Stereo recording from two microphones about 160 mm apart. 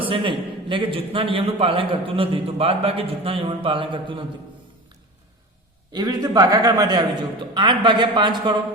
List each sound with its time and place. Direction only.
0.0 s a man's voice: 35° right (ahead or behind)
5.9 s a man's voice: 25° right (ahead or behind)